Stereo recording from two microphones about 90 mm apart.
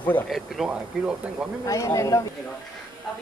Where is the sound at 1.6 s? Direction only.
35° left (ahead or behind).